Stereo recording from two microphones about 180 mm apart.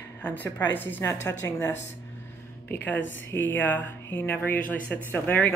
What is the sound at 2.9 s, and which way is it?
Speech, 90° left.